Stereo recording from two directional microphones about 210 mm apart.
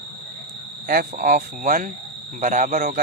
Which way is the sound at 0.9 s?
45° right (ahead or behind).